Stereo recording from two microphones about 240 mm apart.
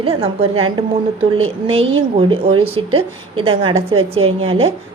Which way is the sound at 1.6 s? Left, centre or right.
Right.